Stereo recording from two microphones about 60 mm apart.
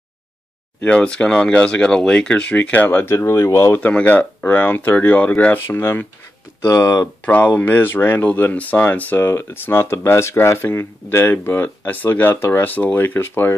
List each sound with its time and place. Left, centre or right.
0.8 s speech: centre; by 3.2 s left
3.2 s speech: left
3.7 s speech: left
5.8 s speech: left
6.6 s speech: left
7.2 s speech: left
9.2 s speech: left